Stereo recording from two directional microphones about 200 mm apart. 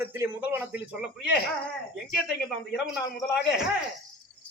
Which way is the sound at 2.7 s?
Centre (ahead or behind).